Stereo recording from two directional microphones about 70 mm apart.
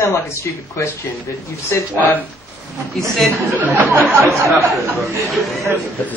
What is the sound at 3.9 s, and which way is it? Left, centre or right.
Speech, right.